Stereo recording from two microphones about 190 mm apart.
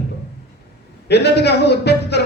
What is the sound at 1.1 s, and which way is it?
A man's voice, 60° left (ahead or behind).